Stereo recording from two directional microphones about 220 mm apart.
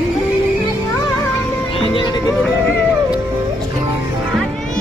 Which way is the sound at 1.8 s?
25° left (ahead or behind).